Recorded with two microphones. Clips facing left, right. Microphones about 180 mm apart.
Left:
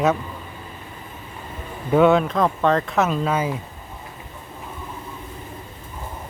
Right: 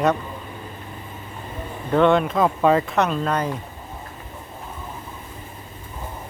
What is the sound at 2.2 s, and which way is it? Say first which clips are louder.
Speech: right 1 dB; 5° right (ahead or behind).